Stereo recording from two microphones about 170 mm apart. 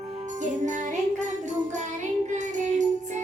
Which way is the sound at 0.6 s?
45° right (ahead or behind).